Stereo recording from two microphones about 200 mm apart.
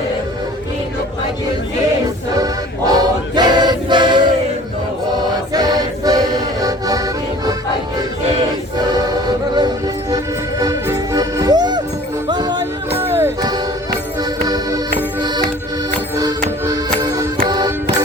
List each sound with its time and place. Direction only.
2.3 s music: 20° right (ahead or behind)
9.6 s music: 20° right (ahead or behind)
16.1 s music: 20° right (ahead or behind)